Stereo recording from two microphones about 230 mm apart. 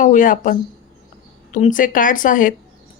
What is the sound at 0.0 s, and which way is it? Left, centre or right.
Speech, left.